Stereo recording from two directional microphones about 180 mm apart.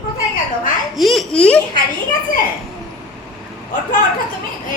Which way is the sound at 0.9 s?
Centre (ahead or behind).